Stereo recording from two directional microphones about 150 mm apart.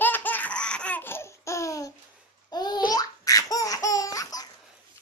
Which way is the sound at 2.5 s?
25° left (ahead or behind).